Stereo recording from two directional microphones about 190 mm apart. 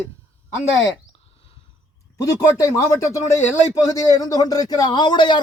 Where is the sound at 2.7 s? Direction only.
15° left (ahead or behind).